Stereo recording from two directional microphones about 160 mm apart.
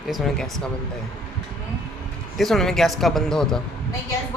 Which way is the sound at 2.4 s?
Centre (ahead or behind).